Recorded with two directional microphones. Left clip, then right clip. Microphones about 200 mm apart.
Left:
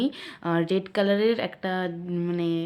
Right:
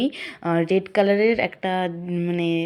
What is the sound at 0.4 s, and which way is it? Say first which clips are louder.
Speech: right 4 dB; 10° right (ahead or behind).